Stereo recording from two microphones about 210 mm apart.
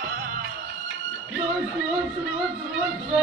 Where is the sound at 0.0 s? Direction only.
45° right (ahead or behind).